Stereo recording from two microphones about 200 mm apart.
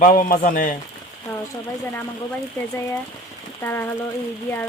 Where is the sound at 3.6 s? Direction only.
10° left (ahead or behind).